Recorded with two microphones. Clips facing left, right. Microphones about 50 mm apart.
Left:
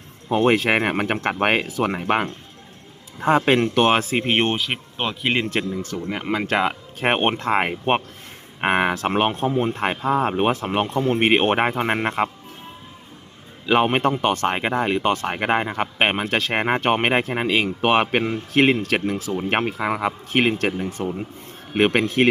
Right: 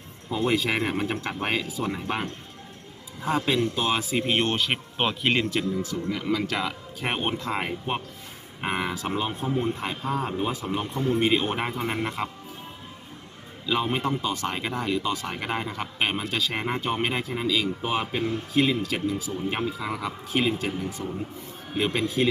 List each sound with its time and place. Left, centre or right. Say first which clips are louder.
0.3 s speech: left 7 dB; left
4.5 s speech: left 1 dB; centre
5.5 s speech: left 2 dB; left
7.2 s speech: left 7 dB; left
7.4 s speech: left 8 dB; left
13.7 s speech: left 7 dB; left